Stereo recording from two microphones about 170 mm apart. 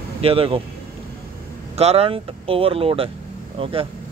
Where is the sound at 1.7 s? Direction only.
35° right (ahead or behind).